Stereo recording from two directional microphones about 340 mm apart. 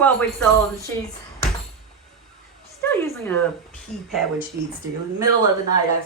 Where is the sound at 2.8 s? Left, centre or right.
Centre.